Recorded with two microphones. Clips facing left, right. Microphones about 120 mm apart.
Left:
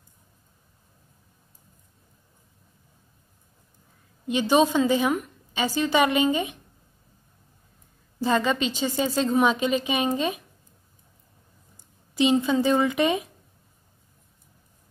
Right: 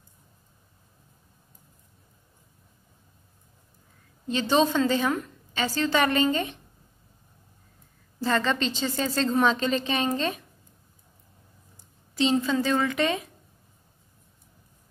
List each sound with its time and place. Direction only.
4.3 s a woman's voice: 15° left (ahead or behind)
8.2 s a woman's voice: 15° left (ahead or behind)
11.7 s speech: 15° left (ahead or behind)